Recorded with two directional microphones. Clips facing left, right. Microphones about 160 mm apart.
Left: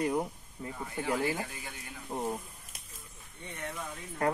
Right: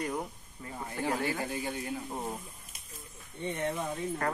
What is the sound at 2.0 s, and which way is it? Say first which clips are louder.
Speech: left 3 dB; 5° left (ahead or behind).